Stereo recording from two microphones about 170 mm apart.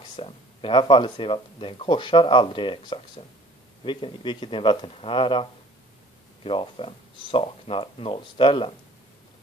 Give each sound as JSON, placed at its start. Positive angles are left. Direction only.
{"t": 0.1, "sound": "speech", "side_deg": 30}